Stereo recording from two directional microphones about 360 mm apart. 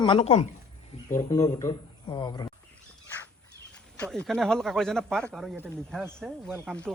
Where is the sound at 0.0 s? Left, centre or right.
Centre.